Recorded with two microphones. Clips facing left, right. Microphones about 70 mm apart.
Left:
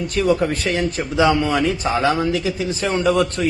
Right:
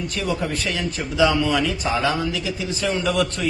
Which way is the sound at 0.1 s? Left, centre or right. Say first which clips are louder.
Left 10 dB; left.